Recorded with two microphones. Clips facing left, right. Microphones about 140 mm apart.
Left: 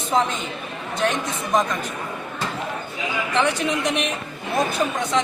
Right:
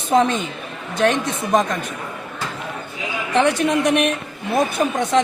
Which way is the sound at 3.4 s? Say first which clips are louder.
Right 5 dB; 60° right (ahead or behind).